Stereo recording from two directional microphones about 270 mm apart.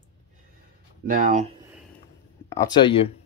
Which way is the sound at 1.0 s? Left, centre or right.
Right.